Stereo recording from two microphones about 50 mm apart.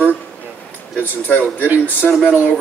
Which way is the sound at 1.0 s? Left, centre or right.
Left.